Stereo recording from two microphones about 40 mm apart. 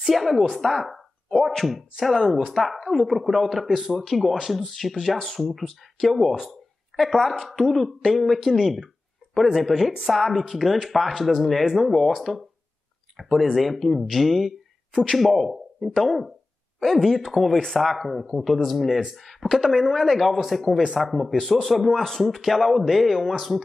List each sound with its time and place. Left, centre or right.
0.0 s speech: centre
9.2 s a sound: right
9.6 s speech: centre
18.9 s speech: centre
19.5 s speech: centre